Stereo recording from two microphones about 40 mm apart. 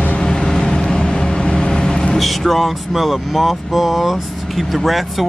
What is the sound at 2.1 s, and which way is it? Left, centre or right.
Speech, centre.